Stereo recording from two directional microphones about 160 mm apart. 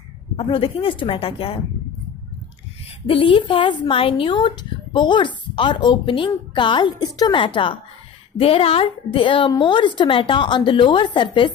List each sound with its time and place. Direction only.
0.4 s a woman's voice: 35° left (ahead or behind)
3.1 s a woman's voice: 35° left (ahead or behind)